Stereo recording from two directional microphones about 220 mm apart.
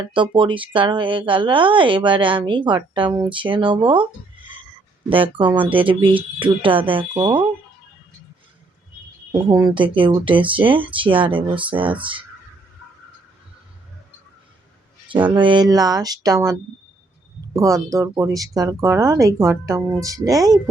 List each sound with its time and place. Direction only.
0.0 s speech: 25° right (ahead or behind)
5.0 s speech: 25° right (ahead or behind)
9.5 s speech: 15° right (ahead or behind)
15.4 s speech: 20° right (ahead or behind)